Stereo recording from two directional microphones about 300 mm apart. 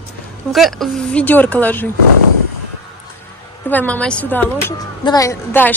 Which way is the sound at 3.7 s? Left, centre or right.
Centre.